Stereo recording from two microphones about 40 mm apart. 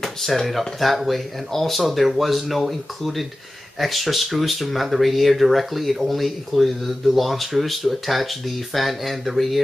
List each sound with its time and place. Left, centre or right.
0.2 s speech: centre